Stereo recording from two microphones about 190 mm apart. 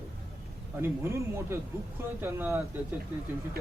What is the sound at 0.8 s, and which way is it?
Speech, 15° right (ahead or behind).